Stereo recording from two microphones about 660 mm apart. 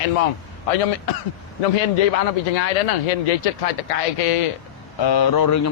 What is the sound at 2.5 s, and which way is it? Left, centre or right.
Speech, left.